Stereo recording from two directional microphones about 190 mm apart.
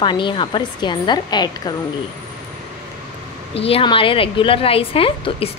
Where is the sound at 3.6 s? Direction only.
30° left (ahead or behind).